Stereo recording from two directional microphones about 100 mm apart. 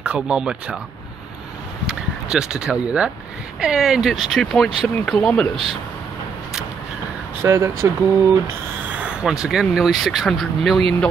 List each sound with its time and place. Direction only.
0.0 s speech: 10° right (ahead or behind)
1.9 s speech: 5° right (ahead or behind)
7.4 s speech: 25° right (ahead or behind)
8.9 s speech: 10° right (ahead or behind)